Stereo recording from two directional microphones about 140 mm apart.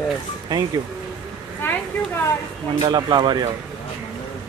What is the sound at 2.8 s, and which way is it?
Speech, 30° right (ahead or behind).